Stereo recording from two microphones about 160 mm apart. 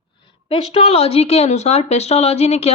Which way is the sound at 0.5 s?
40° left (ahead or behind).